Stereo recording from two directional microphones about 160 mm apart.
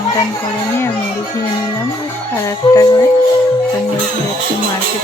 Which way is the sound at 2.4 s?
20° left (ahead or behind).